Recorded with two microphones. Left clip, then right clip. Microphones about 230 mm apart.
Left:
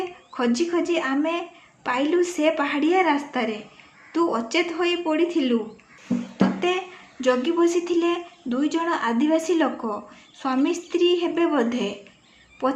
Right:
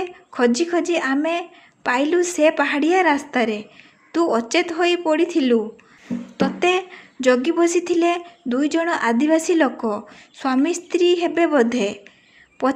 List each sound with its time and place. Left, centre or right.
0.3 s a woman's voice: right